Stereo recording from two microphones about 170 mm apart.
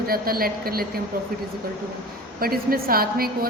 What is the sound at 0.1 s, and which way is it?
Speech, 60° right (ahead or behind).